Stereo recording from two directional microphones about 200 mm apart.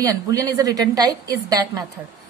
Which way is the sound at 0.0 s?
15° right (ahead or behind).